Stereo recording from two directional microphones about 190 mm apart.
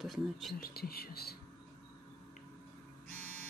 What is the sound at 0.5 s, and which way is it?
Speech, 50° left (ahead or behind).